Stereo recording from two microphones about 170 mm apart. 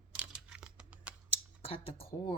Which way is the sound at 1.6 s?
35° left (ahead or behind).